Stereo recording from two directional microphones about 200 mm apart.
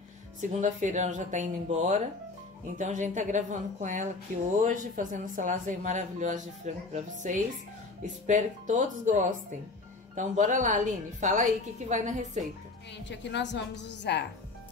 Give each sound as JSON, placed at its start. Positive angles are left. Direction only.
{"t": 0.4, "sound": "speech", "side_deg": -40}
{"t": 12.9, "sound": "a woman's voice", "side_deg": 60}